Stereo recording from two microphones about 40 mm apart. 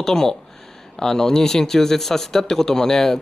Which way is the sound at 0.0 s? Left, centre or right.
Centre.